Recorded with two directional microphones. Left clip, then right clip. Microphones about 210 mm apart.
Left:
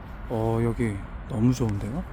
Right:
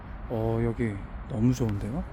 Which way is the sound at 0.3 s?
10° left (ahead or behind).